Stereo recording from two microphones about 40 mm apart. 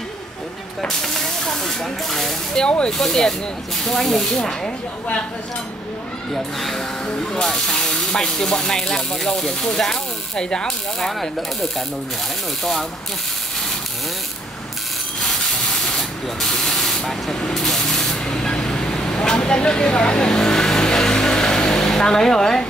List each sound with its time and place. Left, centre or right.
0.8 s speech: centre
2.6 s speech: left
2.9 s speech: centre
6.3 s speech: centre
11.1 s speech: centre
15.2 s spray: centre
18.2 s vehicle: centre